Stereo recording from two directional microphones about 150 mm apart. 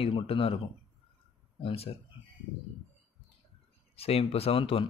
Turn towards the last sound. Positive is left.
turn(degrees=35)  # may be behind; listen again after turning